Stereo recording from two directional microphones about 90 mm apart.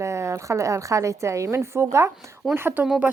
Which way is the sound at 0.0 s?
30° right (ahead or behind).